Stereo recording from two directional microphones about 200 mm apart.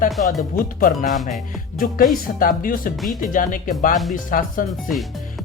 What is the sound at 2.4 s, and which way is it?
Speech, 45° left (ahead or behind).